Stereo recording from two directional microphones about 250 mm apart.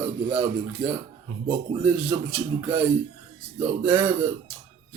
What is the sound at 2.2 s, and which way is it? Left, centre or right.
Mantra, centre.